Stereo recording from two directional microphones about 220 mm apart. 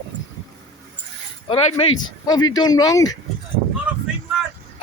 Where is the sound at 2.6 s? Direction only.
15° left (ahead or behind).